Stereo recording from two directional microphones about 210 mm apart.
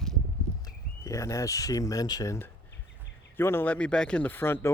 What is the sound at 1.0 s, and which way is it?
Speech, 15° left (ahead or behind).